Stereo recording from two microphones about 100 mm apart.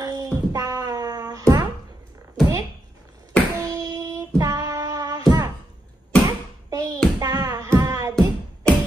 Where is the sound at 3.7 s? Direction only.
40° right (ahead or behind).